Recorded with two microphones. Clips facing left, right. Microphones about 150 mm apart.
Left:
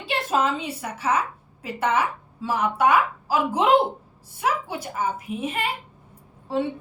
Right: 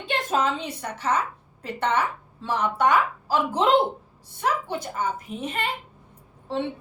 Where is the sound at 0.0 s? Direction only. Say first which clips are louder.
Left 1 dB; 5° left (ahead or behind).